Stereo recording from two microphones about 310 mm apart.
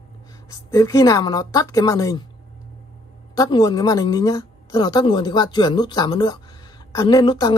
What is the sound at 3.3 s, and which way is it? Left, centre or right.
A woman's voice, centre.